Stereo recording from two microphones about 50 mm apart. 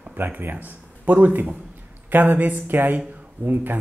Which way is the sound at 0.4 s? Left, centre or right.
Right.